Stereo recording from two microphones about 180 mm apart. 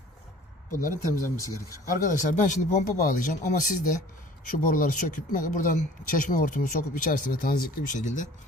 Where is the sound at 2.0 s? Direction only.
45° left (ahead or behind).